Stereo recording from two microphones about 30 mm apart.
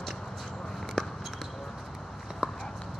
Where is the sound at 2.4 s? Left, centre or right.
Right.